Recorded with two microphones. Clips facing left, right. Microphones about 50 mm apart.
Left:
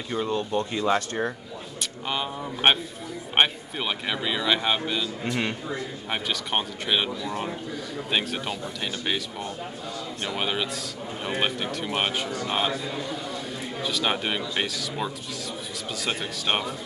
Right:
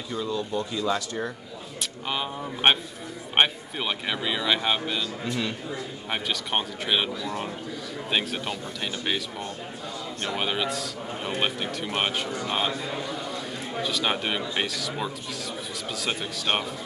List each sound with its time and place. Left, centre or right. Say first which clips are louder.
0.1 s speech: left 3 dB; left
1.8 s speech: even; centre
5.2 s speech: left 2 dB; left
6.0 s speech: even; centre
12.8 s a sound: even; centre
13.8 s speech: left 1 dB; centre